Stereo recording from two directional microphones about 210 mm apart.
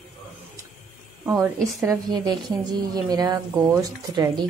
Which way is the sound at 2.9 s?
20° right (ahead or behind).